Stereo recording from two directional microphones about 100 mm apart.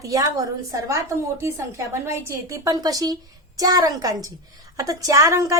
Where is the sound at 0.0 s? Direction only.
35° right (ahead or behind).